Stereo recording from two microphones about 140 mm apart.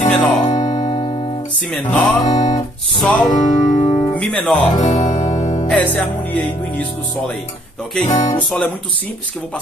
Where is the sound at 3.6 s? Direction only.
30° left (ahead or behind).